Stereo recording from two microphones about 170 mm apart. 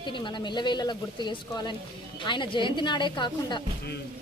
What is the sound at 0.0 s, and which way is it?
A woman's voice, 25° left (ahead or behind).